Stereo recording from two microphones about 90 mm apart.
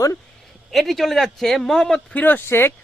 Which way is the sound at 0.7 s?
Centre (ahead or behind).